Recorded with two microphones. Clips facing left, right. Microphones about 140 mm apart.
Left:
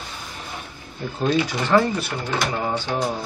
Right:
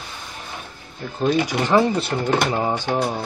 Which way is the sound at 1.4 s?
15° right (ahead or behind).